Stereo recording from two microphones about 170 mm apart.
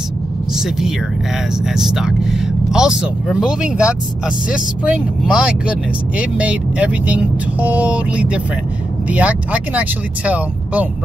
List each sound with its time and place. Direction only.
0.6 s speech: centre (ahead or behind)